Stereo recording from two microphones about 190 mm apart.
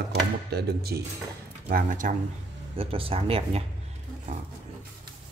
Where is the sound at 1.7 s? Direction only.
45° right (ahead or behind).